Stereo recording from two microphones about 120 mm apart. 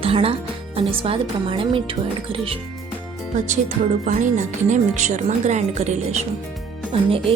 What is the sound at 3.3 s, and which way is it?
Music, 90° right.